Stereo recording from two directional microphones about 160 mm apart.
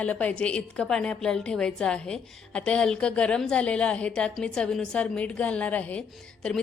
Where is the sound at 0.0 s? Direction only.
10° left (ahead or behind).